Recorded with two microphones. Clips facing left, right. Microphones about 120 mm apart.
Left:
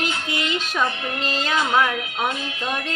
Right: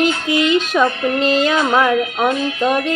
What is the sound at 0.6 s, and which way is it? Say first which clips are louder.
Music: right 8 dB; 65° right (ahead or behind).